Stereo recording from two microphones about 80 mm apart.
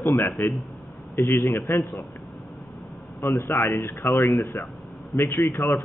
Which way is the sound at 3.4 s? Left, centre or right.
Left.